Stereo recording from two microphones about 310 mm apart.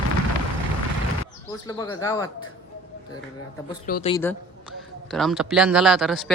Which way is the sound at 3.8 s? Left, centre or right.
Left.